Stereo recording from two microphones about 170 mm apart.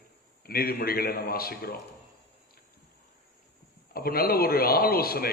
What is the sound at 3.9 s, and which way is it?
A man's voice, 60° left (ahead or behind).